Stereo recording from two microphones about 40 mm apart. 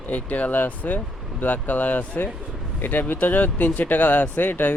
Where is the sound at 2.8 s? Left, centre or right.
Left.